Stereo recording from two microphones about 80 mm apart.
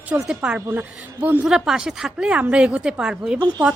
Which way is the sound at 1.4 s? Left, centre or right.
Centre.